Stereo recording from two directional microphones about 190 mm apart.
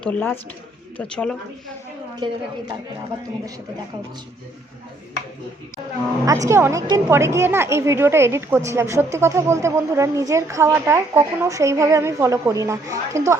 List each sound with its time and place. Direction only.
0.0 s speech: 10° left (ahead or behind)
2.2 s a woman's voice: 25° right (ahead or behind)
6.2 s a woman's voice: 15° right (ahead or behind)